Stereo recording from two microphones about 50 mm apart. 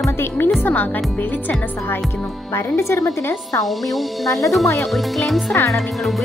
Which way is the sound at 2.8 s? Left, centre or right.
Left.